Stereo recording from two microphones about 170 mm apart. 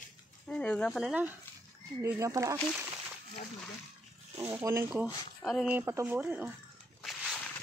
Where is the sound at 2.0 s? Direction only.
15° right (ahead or behind).